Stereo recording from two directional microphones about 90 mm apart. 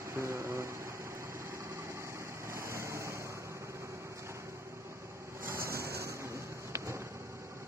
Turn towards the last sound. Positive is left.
turn(degrees=-30)  # may be behind; listen again after turning